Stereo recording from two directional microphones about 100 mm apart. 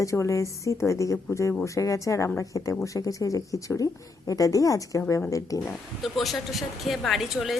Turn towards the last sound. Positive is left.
turn(degrees=0)  # may be behind; listen again after turning